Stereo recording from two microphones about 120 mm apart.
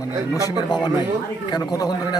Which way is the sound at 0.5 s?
35° left (ahead or behind).